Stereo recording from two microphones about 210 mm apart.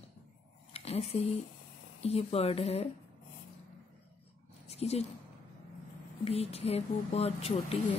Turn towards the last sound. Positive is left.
turn(degrees=30)  # may be behind; listen again after turning